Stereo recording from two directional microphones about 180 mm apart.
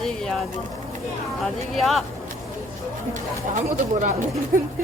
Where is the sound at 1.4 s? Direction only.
Centre (ahead or behind).